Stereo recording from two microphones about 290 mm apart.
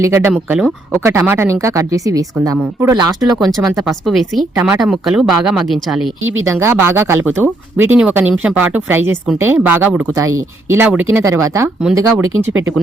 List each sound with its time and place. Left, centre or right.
0.0 s speech: centre
3.2 s a woman's voice: centre
6.2 s speech: right
6.5 s speech: centre